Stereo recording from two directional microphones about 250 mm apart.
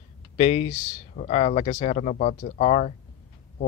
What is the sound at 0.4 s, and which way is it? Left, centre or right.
Speech, left.